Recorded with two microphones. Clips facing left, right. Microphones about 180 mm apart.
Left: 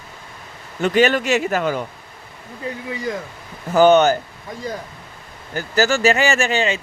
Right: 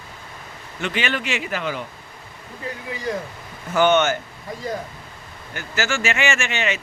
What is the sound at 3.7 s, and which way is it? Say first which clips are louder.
Speech: left 5 dB; 35° left (ahead or behind).